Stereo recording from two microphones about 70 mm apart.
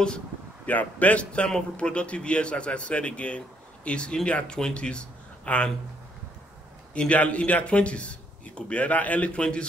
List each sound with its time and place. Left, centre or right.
0.7 s a man's voice: left
6.9 s a man's voice: centre